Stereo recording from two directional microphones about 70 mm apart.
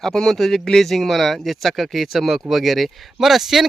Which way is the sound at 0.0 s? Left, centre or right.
Centre.